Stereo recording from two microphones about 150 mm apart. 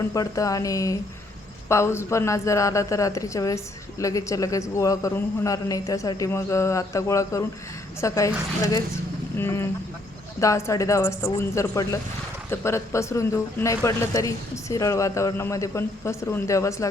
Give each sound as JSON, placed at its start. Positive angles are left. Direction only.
{"t": 0.1, "sound": "a woman's voice", "side_deg": 20}
{"t": 9.4, "sound": "a woman's voice", "side_deg": 15}